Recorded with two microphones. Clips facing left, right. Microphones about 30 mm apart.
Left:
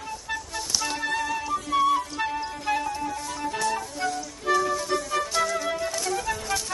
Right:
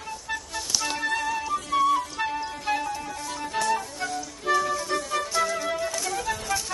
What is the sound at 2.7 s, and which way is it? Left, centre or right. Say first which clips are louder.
Music: left 2 dB; centre.